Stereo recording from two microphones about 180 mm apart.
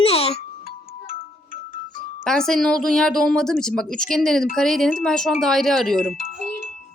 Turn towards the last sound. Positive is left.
turn(degrees=50)  # may be behind; listen again after turning